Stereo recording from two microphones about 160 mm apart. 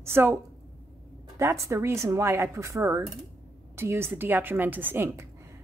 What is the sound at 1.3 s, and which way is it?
A woman's voice, 15° right (ahead or behind).